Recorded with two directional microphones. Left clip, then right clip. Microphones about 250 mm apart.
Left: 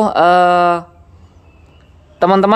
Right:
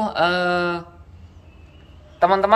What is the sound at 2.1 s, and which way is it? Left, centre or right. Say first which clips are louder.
Speech: left 5 dB; left.